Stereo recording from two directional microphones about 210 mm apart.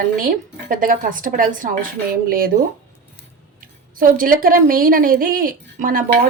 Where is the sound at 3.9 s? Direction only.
40° right (ahead or behind).